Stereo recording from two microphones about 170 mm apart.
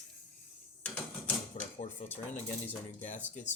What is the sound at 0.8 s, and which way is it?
Mechanisms, 10° left (ahead or behind).